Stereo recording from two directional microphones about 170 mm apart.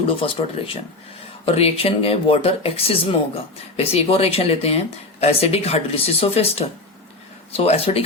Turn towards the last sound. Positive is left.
turn(degrees=35)  # may be behind; listen again after turning